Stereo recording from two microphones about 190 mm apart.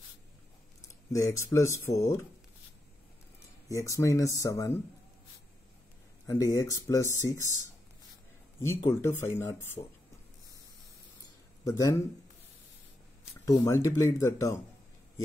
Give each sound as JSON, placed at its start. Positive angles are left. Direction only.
{"t": 0.8, "sound": "a sound", "side_deg": 15}
{"t": 1.4, "sound": "speech", "side_deg": 15}
{"t": 3.6, "sound": "speech", "side_deg": 15}
{"t": 6.2, "sound": "speech", "side_deg": 15}
{"t": 8.5, "sound": "speech", "side_deg": 10}
{"t": 11.6, "sound": "speech", "side_deg": 20}
{"t": 13.5, "sound": "speech", "side_deg": 15}